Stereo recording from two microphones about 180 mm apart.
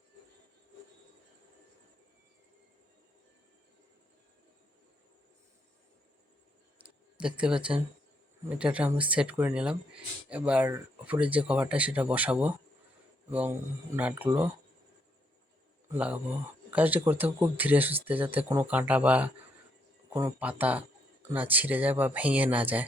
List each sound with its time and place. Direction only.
7.2 s speech: 5° right (ahead or behind)
15.9 s speech: 10° right (ahead or behind)